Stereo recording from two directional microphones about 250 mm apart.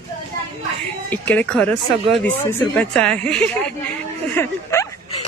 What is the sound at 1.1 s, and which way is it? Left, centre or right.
Speech, centre.